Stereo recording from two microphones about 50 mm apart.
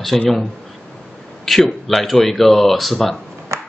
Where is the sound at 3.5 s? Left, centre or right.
Right.